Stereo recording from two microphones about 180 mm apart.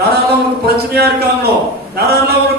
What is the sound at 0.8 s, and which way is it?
A man's voice, 60° right (ahead or behind).